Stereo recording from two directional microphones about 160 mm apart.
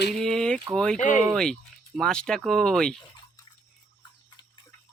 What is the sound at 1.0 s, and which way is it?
Speech, 50° left (ahead or behind).